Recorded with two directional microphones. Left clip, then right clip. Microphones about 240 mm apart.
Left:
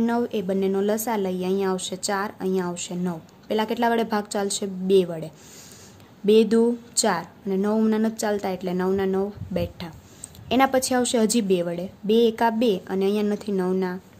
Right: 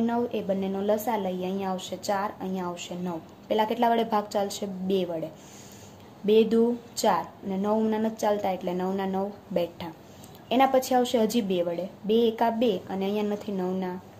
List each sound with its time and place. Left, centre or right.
0.0 s a woman's voice: left